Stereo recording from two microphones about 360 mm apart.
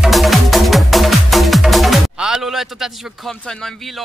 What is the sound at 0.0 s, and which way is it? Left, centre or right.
Music, centre.